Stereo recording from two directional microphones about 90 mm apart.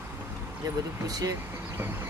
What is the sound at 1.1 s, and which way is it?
Speech, 45° right (ahead or behind).